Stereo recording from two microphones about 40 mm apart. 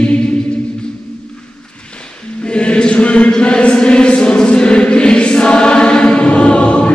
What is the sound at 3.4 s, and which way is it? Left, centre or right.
Choir, left.